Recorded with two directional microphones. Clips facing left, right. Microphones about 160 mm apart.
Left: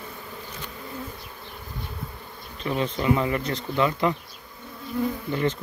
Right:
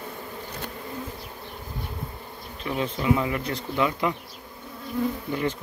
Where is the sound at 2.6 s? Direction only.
5° right (ahead or behind).